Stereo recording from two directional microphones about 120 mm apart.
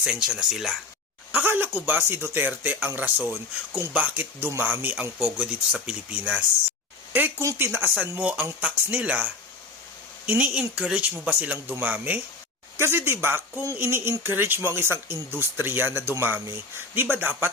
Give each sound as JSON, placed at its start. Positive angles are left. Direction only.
{"t": 0.0, "sound": "speech", "side_deg": -10}
{"t": 1.3, "sound": "speech", "side_deg": -15}